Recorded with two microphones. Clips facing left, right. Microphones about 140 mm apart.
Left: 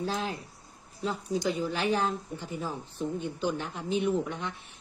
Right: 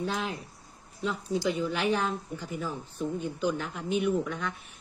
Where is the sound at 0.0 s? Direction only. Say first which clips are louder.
Even; 35° left (ahead or behind).